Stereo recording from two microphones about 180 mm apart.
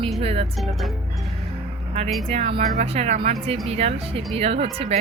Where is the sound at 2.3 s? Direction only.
30° right (ahead or behind).